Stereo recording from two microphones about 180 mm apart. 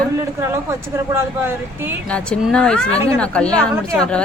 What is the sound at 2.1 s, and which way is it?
A woman's voice, 5° left (ahead or behind).